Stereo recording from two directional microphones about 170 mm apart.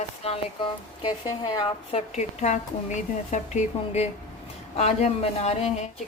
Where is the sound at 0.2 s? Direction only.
35° left (ahead or behind).